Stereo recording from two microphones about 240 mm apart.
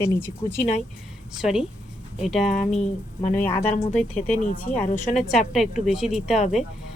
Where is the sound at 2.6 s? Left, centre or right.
Left.